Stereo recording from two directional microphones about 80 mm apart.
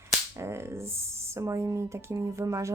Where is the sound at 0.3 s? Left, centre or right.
Right.